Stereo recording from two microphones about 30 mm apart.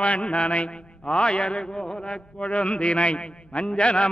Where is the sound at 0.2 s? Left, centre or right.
Left.